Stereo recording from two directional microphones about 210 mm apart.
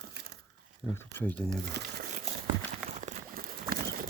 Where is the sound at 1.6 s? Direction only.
50° right (ahead or behind).